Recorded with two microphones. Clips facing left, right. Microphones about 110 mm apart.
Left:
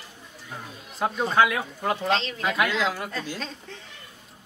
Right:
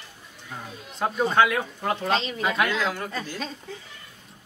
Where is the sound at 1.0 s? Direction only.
Centre (ahead or behind).